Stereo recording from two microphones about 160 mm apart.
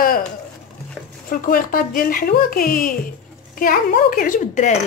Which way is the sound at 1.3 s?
60° left (ahead or behind).